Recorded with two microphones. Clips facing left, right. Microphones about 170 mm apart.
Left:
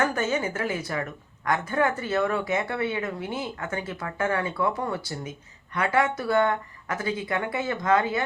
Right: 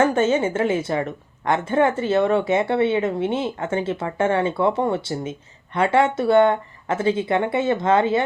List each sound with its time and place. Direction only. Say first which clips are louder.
0.0 s a woman's voice: right 7 dB; 25° right (ahead or behind)